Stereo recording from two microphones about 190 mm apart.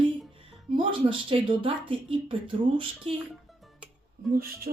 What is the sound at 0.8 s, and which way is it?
Speech, 25° right (ahead or behind).